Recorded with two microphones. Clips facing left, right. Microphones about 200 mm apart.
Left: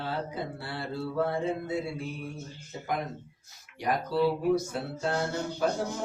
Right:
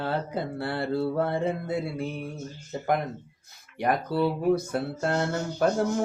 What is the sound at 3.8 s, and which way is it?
Speech, 55° right (ahead or behind).